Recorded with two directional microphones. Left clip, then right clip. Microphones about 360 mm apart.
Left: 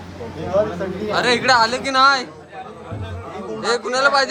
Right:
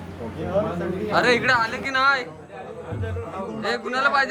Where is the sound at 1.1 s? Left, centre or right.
Centre.